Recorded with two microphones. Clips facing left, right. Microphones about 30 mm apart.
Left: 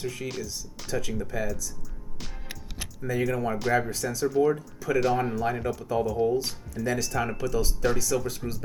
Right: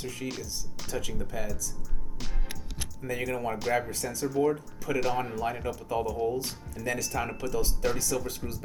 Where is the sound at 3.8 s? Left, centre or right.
Left.